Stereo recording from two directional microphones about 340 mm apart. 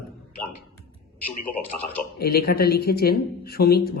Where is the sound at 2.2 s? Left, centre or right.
Left.